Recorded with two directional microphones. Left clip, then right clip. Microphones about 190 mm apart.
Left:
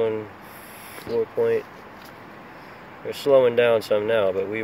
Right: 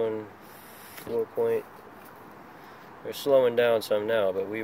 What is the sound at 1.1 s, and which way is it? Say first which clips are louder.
Speech: left 5 dB; 40° right (ahead or behind).